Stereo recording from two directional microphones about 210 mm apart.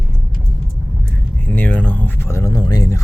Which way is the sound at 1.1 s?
10° left (ahead or behind).